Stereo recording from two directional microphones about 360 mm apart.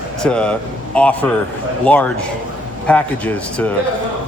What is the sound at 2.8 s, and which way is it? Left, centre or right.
Speech, centre.